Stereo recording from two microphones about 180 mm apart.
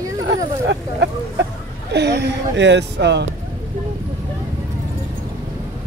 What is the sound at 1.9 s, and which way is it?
Speech, 70° right (ahead or behind).